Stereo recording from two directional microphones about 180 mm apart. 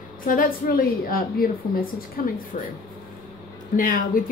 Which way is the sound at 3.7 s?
50° left (ahead or behind).